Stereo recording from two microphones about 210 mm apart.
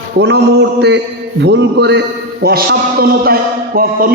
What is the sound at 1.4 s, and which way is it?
A man's voice, 55° right (ahead or behind).